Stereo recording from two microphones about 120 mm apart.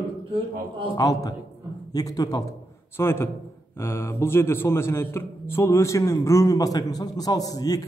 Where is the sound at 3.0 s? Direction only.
20° left (ahead or behind).